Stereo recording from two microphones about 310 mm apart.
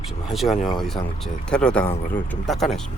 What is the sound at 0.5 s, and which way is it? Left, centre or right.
Speech, left.